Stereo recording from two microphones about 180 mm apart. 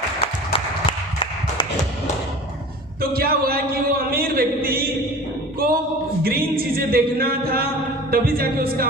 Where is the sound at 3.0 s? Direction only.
55° right (ahead or behind).